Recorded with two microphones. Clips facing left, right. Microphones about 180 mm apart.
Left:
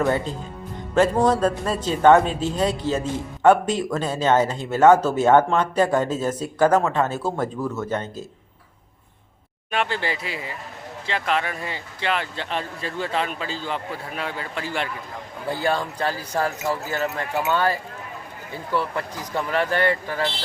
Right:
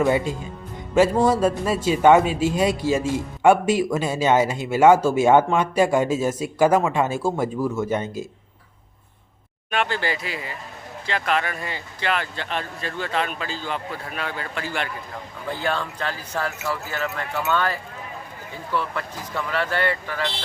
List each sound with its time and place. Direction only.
0.0 s a man's voice: 10° right (ahead or behind)
9.9 s speech: 25° left (ahead or behind)
11.9 s speech: 30° left (ahead or behind)
15.4 s speech: 10° left (ahead or behind)